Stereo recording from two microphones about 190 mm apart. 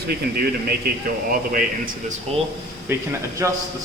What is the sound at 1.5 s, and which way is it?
Speech, 45° right (ahead or behind).